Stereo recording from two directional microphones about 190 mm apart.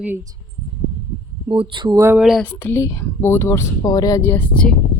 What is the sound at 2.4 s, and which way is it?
Speech, 10° left (ahead or behind).